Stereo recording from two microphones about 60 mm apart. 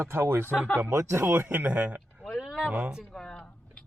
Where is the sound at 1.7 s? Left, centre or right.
Right.